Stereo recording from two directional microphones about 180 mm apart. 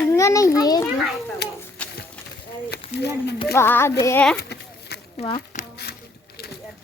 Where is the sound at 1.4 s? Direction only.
70° left (ahead or behind).